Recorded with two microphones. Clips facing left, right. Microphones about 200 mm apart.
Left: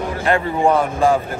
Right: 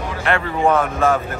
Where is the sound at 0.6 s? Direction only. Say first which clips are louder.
Even; 15° left (ahead or behind).